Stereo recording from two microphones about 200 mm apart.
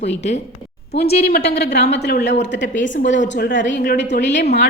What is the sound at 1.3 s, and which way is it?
A woman's voice, 55° left (ahead or behind).